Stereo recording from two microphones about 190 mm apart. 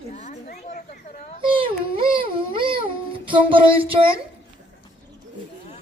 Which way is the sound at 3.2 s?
25° right (ahead or behind).